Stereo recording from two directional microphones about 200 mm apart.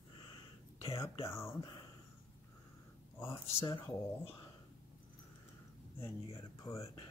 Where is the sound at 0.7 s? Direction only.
15° left (ahead or behind).